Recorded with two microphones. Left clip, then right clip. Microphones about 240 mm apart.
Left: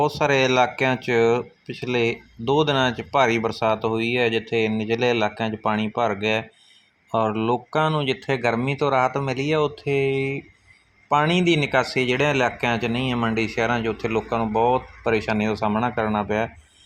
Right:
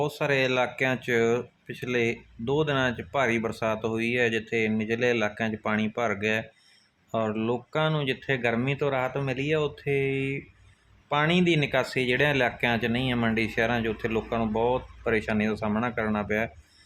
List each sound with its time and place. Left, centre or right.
0.0 s speech: centre